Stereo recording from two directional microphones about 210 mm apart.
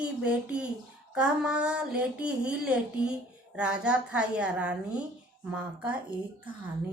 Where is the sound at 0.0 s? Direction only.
5° right (ahead or behind).